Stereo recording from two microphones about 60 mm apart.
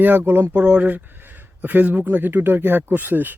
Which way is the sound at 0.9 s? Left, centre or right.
Right.